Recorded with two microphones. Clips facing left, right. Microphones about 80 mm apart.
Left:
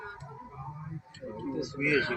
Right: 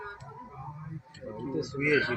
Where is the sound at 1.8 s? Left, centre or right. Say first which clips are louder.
Right 2 dB; right.